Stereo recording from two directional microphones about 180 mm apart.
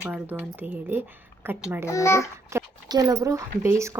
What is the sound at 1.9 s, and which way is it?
Speech, 15° left (ahead or behind).